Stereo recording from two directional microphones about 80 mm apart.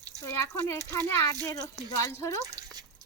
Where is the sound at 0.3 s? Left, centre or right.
Left.